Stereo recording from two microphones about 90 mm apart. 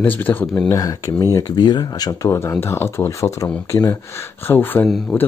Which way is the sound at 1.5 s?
50° left (ahead or behind).